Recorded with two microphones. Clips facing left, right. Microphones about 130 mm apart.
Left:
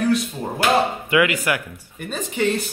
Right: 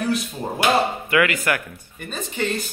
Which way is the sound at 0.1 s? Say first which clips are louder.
Left 3 dB; 10° right (ahead or behind).